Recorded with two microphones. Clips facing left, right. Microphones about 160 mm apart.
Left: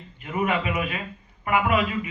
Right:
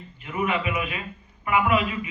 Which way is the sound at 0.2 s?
40° left (ahead or behind).